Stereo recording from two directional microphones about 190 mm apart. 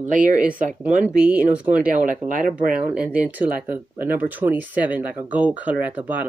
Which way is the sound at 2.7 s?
5° right (ahead or behind).